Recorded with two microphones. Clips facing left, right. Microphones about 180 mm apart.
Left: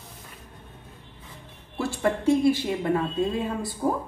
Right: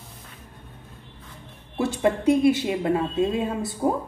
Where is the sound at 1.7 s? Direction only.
20° right (ahead or behind).